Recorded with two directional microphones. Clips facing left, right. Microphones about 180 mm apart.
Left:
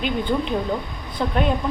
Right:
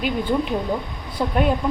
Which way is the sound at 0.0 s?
5° right (ahead or behind).